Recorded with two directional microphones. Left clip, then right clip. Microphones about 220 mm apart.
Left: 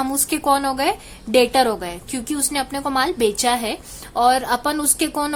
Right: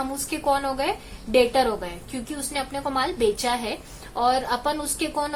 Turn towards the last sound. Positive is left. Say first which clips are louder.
# left 5 dB
turn(degrees=35)  # may be behind; listen again after turning